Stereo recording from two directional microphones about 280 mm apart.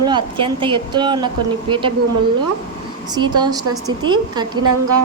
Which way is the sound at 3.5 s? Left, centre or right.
Centre.